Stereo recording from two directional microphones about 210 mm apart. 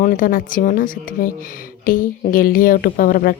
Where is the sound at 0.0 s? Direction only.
40° left (ahead or behind).